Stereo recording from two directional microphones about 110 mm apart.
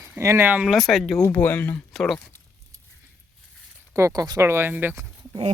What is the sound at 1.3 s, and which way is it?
Speech, 15° left (ahead or behind).